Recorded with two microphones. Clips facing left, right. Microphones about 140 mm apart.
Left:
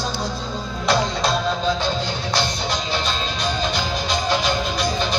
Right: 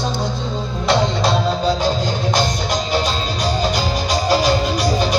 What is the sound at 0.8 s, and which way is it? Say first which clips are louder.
Music: right 3 dB; 25° right (ahead or behind).